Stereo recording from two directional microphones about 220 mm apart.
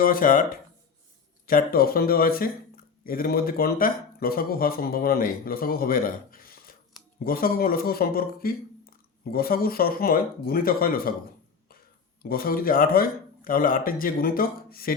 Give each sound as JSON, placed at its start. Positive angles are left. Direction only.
{"t": 0.0, "sound": "speech", "side_deg": 40}
{"t": 12.2, "sound": "speech", "side_deg": 40}